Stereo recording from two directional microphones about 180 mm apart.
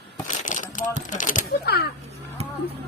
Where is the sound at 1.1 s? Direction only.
45° left (ahead or behind).